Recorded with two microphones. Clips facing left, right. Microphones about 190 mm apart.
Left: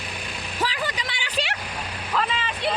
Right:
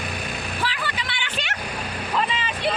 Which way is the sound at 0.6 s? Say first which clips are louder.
Left 4 dB; 40° left (ahead or behind).